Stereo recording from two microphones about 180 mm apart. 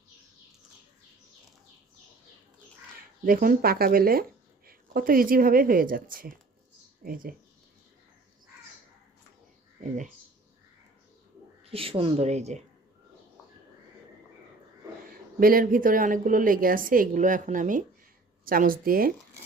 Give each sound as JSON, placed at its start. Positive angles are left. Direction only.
{"t": 3.2, "sound": "a woman's voice", "side_deg": -50}
{"t": 11.6, "sound": "speech", "side_deg": -30}
{"t": 15.4, "sound": "a woman's voice", "side_deg": -50}